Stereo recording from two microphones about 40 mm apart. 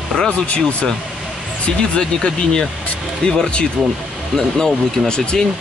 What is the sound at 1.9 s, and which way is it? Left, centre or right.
Speech, centre.